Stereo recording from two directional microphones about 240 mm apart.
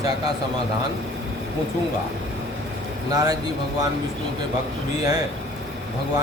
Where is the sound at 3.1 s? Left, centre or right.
Centre.